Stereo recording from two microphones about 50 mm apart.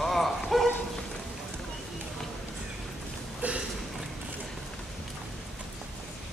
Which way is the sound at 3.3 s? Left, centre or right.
Right.